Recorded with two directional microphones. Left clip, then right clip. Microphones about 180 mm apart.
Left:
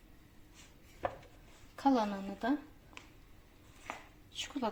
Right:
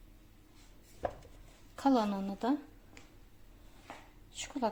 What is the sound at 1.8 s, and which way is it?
Speech, 15° right (ahead or behind).